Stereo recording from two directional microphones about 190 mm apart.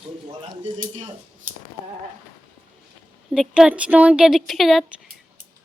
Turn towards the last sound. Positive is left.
turn(degrees=0)  # may be behind; listen again after turning